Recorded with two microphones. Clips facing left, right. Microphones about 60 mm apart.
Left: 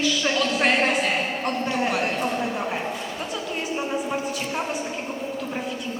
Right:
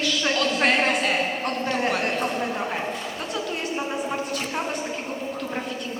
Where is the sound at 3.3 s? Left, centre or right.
Centre.